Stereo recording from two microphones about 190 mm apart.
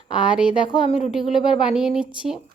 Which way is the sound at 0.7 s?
30° left (ahead or behind).